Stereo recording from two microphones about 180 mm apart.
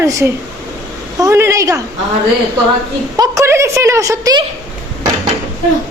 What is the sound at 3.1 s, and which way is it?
A woman's voice, 20° right (ahead or behind).